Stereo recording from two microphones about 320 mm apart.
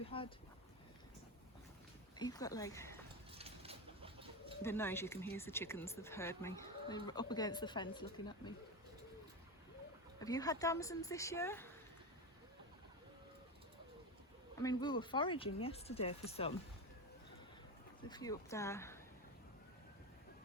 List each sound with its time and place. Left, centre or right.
0.1 s speech: centre
2.1 s speech: centre
3.3 s bird: centre
4.6 s speech: centre
10.2 s speech: centre
14.6 s speech: centre
18.1 s speech: centre